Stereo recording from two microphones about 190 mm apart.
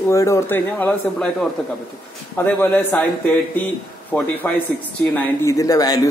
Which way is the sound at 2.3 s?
10° left (ahead or behind).